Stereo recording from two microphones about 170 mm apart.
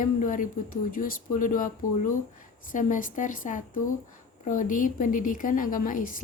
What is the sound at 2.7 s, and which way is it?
A woman's voice, 50° left (ahead or behind).